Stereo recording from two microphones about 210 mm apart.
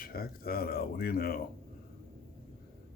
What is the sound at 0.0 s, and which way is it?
Speech, 45° left (ahead or behind).